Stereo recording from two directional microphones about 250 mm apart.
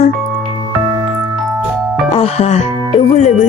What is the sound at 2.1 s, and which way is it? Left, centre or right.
Music, left.